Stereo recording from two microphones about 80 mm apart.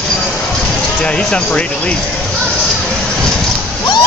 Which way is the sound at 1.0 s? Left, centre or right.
Centre.